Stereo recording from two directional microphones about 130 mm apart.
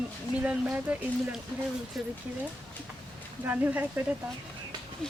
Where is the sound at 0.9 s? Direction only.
10° right (ahead or behind).